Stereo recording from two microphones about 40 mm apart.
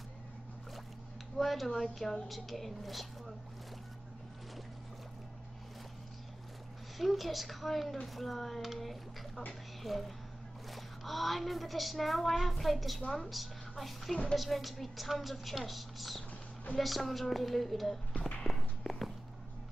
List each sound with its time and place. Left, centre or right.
1.4 s speech: centre
7.0 s speech: centre
18.1 s a sound: left
18.5 s walk: centre